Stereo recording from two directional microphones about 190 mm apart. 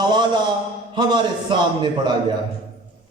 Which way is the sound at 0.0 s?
20° right (ahead or behind).